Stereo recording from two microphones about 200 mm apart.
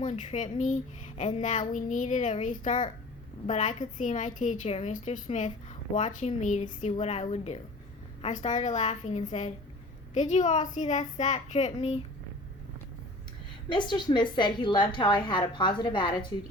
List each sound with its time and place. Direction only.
0.0 s a woman's voice: 40° left (ahead or behind)
13.7 s a woman's voice: 25° left (ahead or behind)